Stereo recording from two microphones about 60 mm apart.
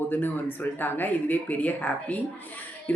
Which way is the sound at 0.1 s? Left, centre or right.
Left.